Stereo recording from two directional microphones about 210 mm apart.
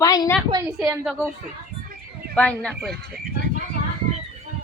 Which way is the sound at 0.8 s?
10° right (ahead or behind).